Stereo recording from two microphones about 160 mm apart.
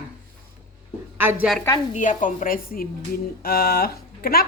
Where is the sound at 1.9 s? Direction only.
55° left (ahead or behind).